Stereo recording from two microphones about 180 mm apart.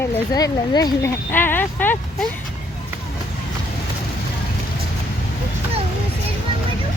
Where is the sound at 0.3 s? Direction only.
20° left (ahead or behind).